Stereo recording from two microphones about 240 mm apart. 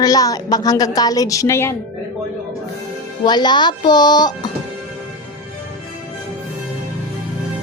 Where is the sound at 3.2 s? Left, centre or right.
Centre.